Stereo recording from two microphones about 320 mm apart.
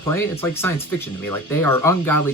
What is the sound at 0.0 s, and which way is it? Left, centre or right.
Speech, centre.